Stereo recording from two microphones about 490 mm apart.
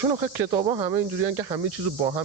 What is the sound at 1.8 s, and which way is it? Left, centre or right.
Speech, right.